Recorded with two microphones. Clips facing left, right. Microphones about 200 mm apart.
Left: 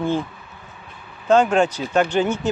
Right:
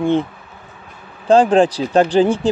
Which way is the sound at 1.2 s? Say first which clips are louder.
Right 4 dB; 30° right (ahead or behind).